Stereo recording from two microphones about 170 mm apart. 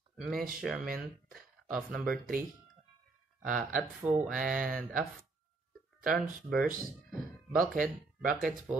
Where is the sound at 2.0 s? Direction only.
55° right (ahead or behind).